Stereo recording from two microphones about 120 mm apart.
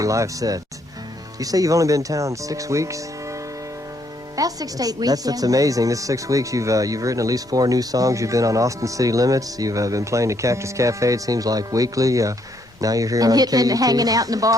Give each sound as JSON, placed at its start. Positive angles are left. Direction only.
{"t": 0.0, "sound": "speech", "side_deg": -25}
{"t": 4.4, "sound": "speech", "side_deg": -30}